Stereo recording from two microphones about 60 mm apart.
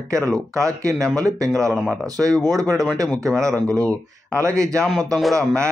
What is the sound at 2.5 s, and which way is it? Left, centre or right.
Speech, right.